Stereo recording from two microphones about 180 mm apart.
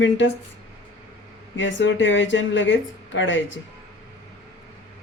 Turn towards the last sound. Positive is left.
turn(degrees=90)